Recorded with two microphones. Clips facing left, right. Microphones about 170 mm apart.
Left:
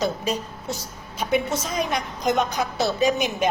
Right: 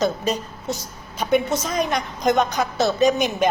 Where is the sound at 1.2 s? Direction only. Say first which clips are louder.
Right 3 dB; 5° left (ahead or behind).